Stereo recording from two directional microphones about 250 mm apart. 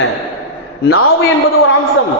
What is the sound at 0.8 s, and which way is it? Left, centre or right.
Speech, left.